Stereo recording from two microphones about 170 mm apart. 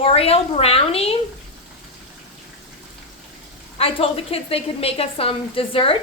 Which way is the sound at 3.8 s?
35° left (ahead or behind).